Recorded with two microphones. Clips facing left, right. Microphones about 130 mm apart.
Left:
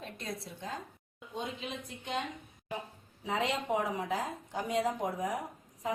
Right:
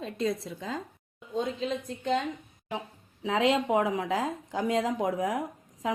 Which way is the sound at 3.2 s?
90° right.